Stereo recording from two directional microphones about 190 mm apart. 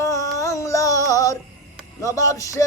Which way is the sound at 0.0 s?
15° left (ahead or behind).